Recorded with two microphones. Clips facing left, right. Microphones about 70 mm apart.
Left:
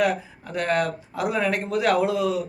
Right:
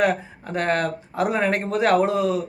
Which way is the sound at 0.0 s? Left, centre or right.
Right.